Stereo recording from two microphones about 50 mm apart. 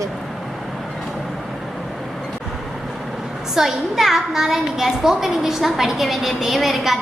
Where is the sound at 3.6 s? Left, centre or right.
Centre.